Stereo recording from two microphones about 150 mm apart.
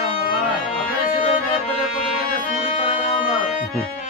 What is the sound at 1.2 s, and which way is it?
Music, 40° left (ahead or behind).